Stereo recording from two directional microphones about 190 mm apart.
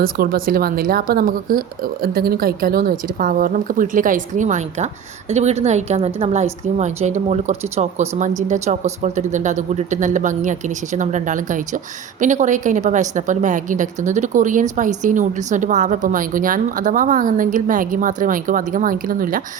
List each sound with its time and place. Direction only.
0.0 s a woman's voice: 50° right (ahead or behind)